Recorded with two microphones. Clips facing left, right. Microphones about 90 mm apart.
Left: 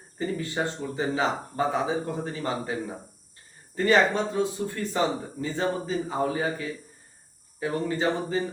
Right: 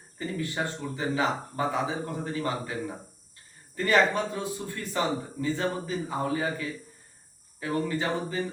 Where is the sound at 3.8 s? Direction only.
25° left (ahead or behind).